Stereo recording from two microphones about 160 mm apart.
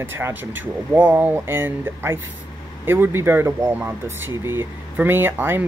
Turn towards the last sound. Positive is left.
turn(degrees=-15)  # may be behind; listen again after turning